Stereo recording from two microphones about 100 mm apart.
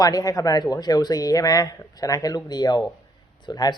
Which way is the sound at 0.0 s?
40° left (ahead or behind).